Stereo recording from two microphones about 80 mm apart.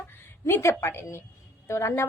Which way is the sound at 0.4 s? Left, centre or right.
Left.